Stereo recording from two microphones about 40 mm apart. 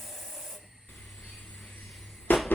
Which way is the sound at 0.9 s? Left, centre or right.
Left.